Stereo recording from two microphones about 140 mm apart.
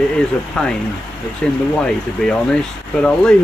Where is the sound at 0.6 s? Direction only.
5° left (ahead or behind).